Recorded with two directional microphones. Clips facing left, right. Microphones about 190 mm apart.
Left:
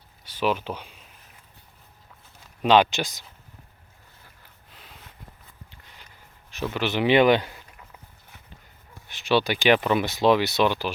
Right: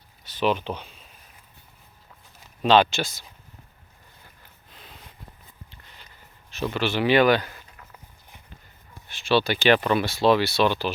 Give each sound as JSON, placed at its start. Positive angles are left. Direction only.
{"t": 0.3, "sound": "speech", "side_deg": 5}
{"t": 2.6, "sound": "speech", "side_deg": 10}
{"t": 4.7, "sound": "a sound", "side_deg": 10}
{"t": 6.7, "sound": "speech", "side_deg": 20}
{"t": 9.0, "sound": "speech", "side_deg": 15}